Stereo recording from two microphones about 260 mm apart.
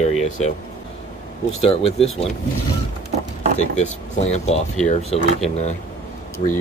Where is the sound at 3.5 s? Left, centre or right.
Left.